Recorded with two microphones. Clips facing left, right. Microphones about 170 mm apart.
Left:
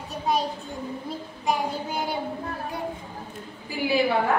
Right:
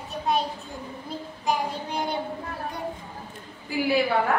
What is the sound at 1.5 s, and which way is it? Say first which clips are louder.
Child singing: left 1 dB; 5° left (ahead or behind).